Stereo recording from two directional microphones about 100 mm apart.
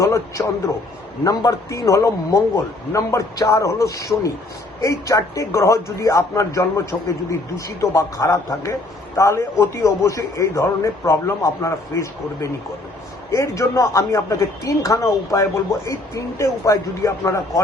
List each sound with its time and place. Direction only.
0.0 s a man's voice: 30° left (ahead or behind)